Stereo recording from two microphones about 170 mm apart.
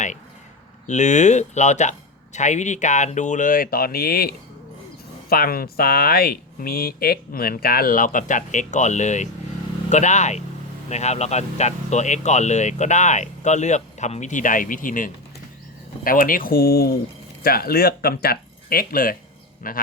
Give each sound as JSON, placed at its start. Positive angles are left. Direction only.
{"t": 0.9, "sound": "speech", "side_deg": 45}